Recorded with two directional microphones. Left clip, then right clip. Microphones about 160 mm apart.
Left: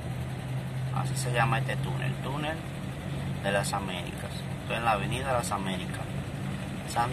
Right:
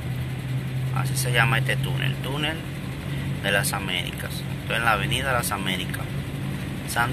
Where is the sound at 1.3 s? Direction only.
10° left (ahead or behind).